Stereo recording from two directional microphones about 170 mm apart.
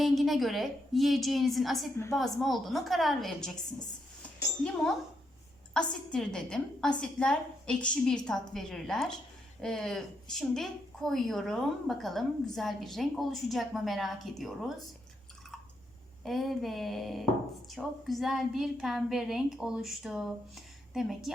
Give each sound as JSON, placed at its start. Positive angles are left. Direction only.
{"t": 0.0, "sound": "a woman's voice", "side_deg": 0}
{"t": 4.6, "sound": "a woman's voice", "side_deg": 5}
{"t": 16.2, "sound": "a woman's voice", "side_deg": 0}